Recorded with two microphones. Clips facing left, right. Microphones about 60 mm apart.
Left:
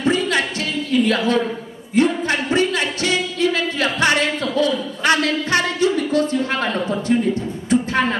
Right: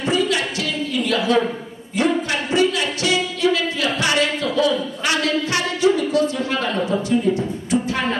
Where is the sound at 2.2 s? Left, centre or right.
Left.